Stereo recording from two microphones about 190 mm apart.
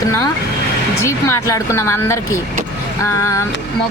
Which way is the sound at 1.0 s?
15° left (ahead or behind).